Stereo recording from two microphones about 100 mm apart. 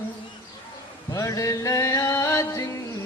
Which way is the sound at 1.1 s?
35° left (ahead or behind).